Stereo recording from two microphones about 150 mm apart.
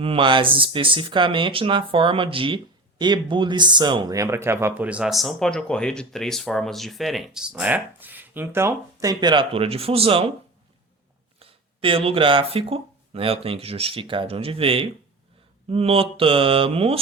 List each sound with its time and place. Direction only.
0.0 s speech: 35° right (ahead or behind)
11.3 s speech: 40° right (ahead or behind)